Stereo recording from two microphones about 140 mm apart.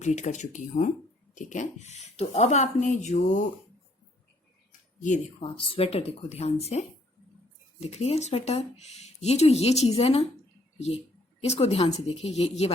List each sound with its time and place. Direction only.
0.0 s speech: 55° left (ahead or behind)
5.4 s a woman's voice: 40° left (ahead or behind)